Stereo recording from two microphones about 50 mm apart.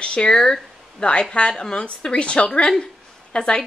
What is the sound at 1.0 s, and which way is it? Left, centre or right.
A woman's voice, left.